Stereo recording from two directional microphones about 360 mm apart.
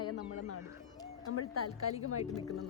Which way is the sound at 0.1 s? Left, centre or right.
Left.